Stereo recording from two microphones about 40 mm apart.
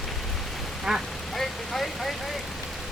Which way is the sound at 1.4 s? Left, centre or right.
Centre.